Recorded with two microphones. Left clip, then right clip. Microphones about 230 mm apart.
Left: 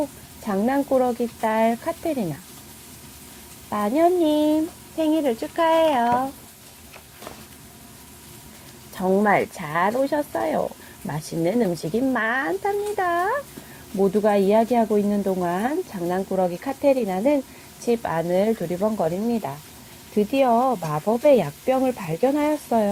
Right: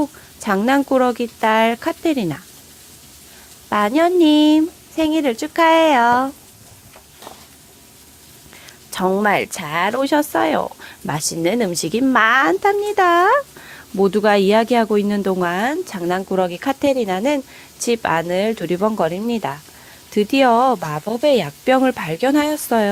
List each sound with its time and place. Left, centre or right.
0.4 s a woman's voice: right
3.7 s speech: right
9.2 s speech: right
18.8 s speech: right
19.1 s speech: right
20.5 s speech: right
20.9 s speech: right